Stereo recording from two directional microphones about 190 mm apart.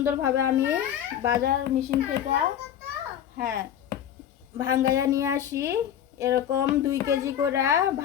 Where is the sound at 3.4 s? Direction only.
15° right (ahead or behind).